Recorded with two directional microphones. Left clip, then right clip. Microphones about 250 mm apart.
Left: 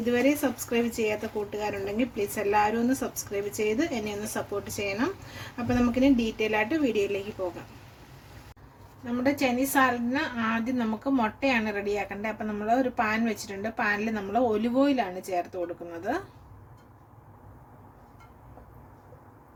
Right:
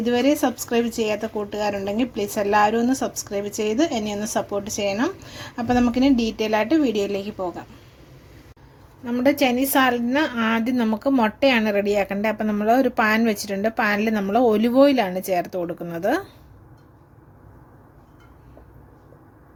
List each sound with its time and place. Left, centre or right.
0.0 s a woman's voice: right
9.0 s a woman's voice: right